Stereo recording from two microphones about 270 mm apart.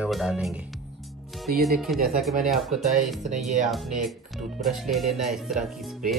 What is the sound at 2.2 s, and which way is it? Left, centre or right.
Speech, centre.